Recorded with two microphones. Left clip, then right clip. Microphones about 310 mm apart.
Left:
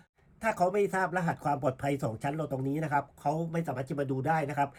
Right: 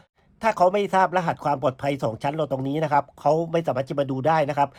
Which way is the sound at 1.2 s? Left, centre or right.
Centre.